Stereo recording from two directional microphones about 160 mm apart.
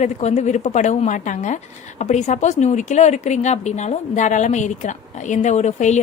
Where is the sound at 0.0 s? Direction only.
45° left (ahead or behind).